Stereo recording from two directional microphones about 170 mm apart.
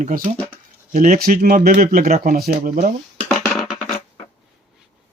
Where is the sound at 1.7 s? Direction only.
55° right (ahead or behind).